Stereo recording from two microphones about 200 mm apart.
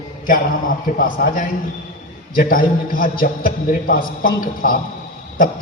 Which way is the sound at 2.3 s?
45° left (ahead or behind).